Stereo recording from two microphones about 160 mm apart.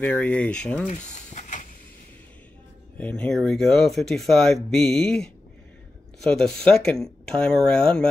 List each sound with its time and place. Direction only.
0.0 s speech: 10° left (ahead or behind)
0.8 s a sound: 50° left (ahead or behind)
3.0 s speech: 5° left (ahead or behind)